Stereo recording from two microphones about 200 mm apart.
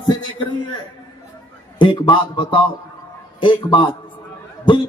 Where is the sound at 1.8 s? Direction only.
25° left (ahead or behind).